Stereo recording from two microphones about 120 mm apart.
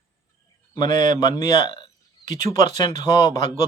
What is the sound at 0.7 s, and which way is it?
Speech, 35° left (ahead or behind).